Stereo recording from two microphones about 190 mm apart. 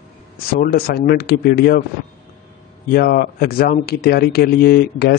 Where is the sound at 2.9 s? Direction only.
55° left (ahead or behind).